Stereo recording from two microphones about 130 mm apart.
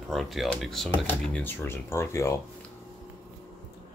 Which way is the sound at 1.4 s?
15° left (ahead or behind).